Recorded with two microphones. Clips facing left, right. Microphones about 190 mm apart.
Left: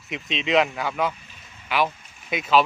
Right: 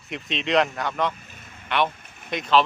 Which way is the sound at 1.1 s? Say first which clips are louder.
Right 3 dB; 50° right (ahead or behind).